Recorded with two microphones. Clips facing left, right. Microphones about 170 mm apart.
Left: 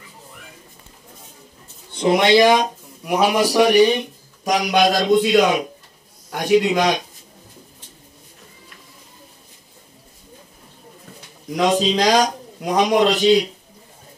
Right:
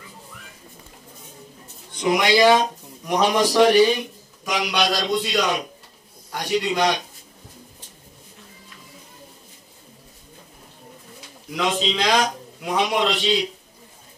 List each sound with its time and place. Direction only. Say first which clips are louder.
1.9 s speech: left 4 dB; 30° left (ahead or behind)
4.5 s a man's voice: left 6 dB; 45° left (ahead or behind)
5.2 s a man's voice: left 7 dB; 55° left (ahead or behind)
11.5 s a man's voice: left 6 dB; 40° left (ahead or behind)